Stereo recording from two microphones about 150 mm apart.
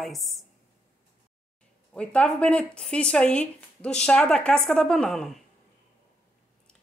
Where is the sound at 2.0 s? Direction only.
10° left (ahead or behind).